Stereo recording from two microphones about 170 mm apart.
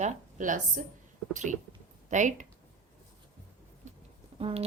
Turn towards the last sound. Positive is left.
turn(degrees=-35)  # may be behind; listen again after turning